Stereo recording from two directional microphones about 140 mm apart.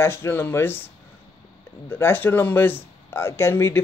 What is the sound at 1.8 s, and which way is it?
Speech, 15° left (ahead or behind).